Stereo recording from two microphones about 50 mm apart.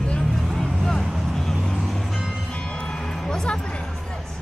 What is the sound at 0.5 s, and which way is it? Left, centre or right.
Vehicle, centre.